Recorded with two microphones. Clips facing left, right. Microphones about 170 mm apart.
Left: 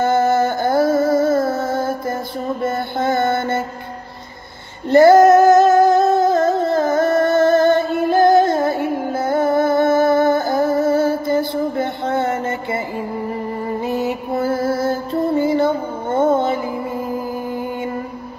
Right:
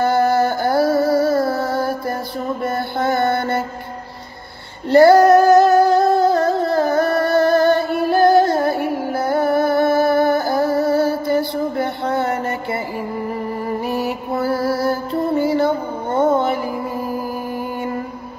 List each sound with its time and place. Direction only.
0.0 s a sound: 20° left (ahead or behind)
2.6 s mantra: 20° left (ahead or behind)
4.8 s female singing: 20° left (ahead or behind)
13.8 s music: 20° left (ahead or behind)